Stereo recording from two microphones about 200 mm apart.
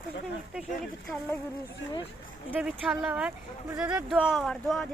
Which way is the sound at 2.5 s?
5° right (ahead or behind).